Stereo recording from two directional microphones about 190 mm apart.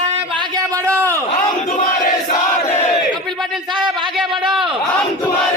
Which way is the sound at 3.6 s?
25° right (ahead or behind).